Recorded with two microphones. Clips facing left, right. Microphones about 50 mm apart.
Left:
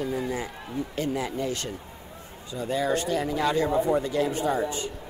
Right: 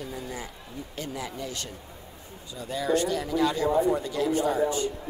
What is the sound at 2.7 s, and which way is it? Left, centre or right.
A man's voice, left.